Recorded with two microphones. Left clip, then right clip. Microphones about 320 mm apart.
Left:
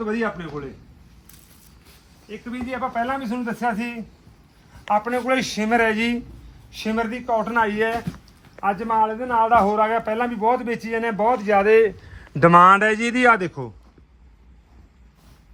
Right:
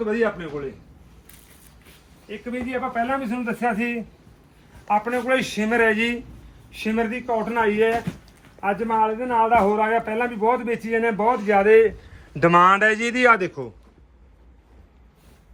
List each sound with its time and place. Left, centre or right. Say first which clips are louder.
0.0 s a man's voice: right 3 dB; left
2.2 s a man's voice: right 2 dB; centre